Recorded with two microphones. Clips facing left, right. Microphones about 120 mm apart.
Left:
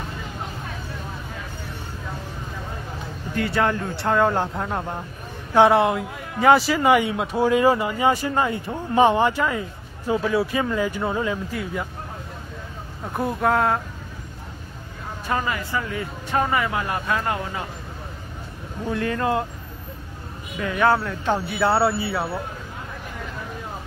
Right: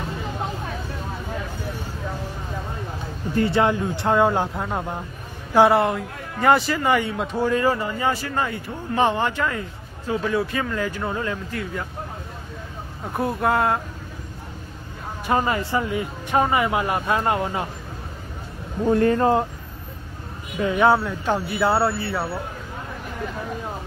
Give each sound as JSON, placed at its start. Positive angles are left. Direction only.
{"t": 3.3, "sound": "speech", "side_deg": -30}
{"t": 3.6, "sound": "a man's voice", "side_deg": -15}
{"t": 6.9, "sound": "speech", "side_deg": 10}
{"t": 13.1, "sound": "speech", "side_deg": 0}
{"t": 15.2, "sound": "speech", "side_deg": -30}
{"t": 18.9, "sound": "speech", "side_deg": -40}
{"t": 20.5, "sound": "a man's voice", "side_deg": -20}
{"t": 21.5, "sound": "speech", "side_deg": 0}